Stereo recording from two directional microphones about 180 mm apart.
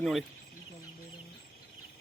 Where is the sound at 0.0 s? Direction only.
Centre (ahead or behind).